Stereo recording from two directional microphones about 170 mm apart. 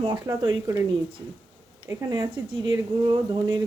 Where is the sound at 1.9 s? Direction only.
15° right (ahead or behind).